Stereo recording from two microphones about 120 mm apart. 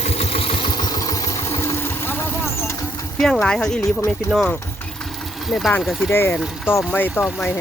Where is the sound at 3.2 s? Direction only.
5° left (ahead or behind).